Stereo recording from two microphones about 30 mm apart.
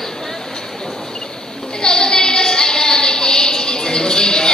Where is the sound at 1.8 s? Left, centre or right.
Left.